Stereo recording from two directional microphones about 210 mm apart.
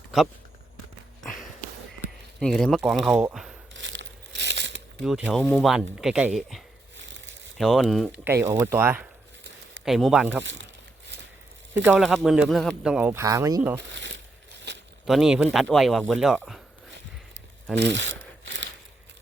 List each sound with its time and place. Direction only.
2.4 s speech: 5° left (ahead or behind)
3.8 s crumpling: 60° right (ahead or behind)
5.0 s speech: 5° right (ahead or behind)
7.0 s a sound: 60° right (ahead or behind)
7.6 s speech: centre (ahead or behind)
8.4 s speech: 10° right (ahead or behind)
10.4 s speech: 60° right (ahead or behind)
11.1 s a sound: 55° right (ahead or behind)
11.7 s speech: 10° right (ahead or behind)
13.7 s a sound: 60° right (ahead or behind)
15.0 s speech: centre (ahead or behind)
17.7 s a sound: 60° right (ahead or behind)